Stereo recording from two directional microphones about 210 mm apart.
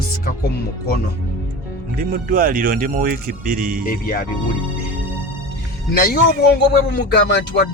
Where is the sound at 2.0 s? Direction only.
40° right (ahead or behind).